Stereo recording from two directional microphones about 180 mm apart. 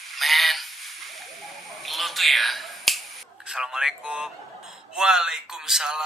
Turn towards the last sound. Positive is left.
turn(degrees=-5)  # may be behind; listen again after turning